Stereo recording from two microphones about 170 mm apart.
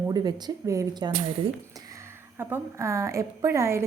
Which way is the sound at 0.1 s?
25° right (ahead or behind).